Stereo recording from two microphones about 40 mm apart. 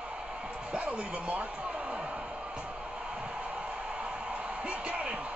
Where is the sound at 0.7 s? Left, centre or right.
Right.